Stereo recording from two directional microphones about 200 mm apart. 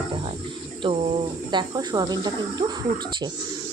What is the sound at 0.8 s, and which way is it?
Speech, 30° right (ahead or behind).